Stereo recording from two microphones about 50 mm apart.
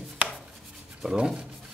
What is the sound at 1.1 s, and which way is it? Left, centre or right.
Speech, centre.